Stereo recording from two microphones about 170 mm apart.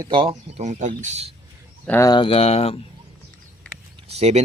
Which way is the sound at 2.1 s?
30° left (ahead or behind).